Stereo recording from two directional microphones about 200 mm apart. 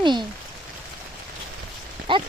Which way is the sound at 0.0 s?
25° right (ahead or behind).